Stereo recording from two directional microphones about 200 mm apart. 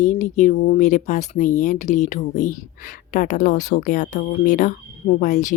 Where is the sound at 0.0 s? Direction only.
35° left (ahead or behind).